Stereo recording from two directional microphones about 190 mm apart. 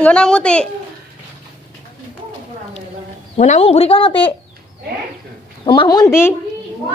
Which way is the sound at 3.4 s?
35° left (ahead or behind).